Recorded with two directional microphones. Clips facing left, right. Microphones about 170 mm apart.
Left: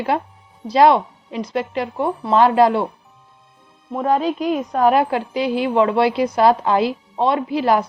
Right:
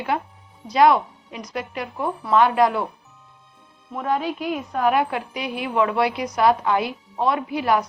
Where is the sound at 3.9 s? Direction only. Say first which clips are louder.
Left 5 dB; 35° left (ahead or behind).